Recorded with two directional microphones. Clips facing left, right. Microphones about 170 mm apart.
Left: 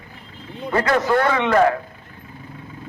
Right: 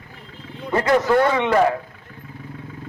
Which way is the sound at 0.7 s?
20° right (ahead or behind).